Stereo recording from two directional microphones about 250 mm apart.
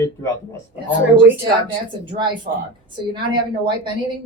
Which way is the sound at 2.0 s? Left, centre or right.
Centre.